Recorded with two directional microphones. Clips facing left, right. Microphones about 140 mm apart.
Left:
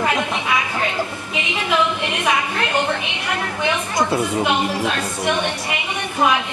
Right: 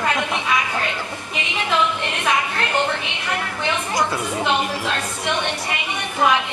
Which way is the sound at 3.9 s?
25° left (ahead or behind).